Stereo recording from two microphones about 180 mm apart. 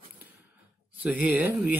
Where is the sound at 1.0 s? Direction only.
10° right (ahead or behind).